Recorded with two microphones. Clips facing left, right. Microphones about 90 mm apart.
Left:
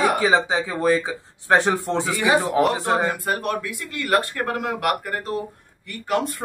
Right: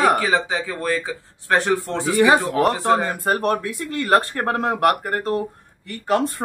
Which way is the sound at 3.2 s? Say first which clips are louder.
Right 4 dB; 40° right (ahead or behind).